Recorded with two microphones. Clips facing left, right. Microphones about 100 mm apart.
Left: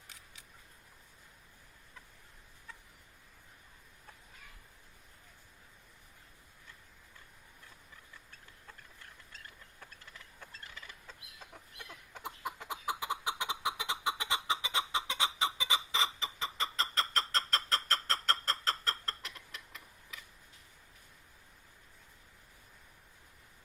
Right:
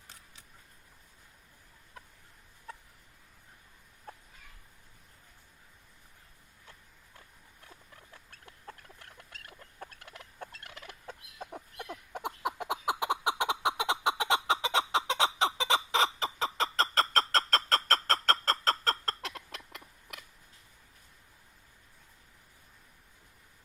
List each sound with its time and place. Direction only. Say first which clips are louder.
8.1 s chicken: right 2 dB; 65° right (ahead or behind)
9.9 s fowl: right 4 dB; 70° right (ahead or behind); by 11.9 s 50° right (ahead or behind)
12.1 s a sound: right 7 dB; 70° right (ahead or behind)